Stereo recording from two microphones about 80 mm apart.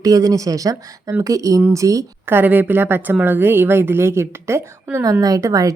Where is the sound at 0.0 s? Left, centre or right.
Right.